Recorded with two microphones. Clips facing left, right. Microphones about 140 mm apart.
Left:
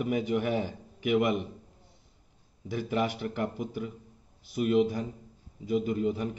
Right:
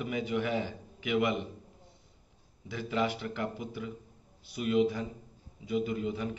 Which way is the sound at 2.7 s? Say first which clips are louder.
Left 2 dB; 50° left (ahead or behind).